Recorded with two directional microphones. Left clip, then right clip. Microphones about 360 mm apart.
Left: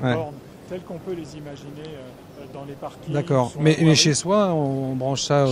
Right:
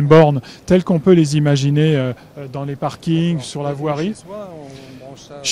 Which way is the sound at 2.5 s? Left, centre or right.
Right.